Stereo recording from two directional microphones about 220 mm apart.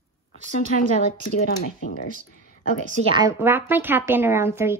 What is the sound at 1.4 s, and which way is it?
Speech, 35° left (ahead or behind).